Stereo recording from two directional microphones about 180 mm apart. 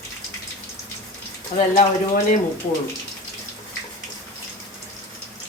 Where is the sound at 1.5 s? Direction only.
40° left (ahead or behind).